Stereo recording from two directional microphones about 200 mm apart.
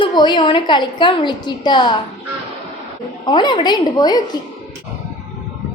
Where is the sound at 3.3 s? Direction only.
20° left (ahead or behind).